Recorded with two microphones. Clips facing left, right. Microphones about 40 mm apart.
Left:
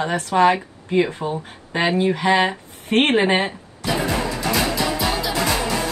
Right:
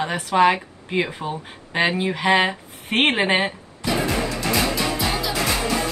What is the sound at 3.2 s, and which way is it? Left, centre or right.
Speech, right.